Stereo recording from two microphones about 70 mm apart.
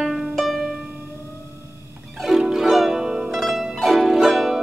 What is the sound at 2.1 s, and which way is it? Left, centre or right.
Zither, centre.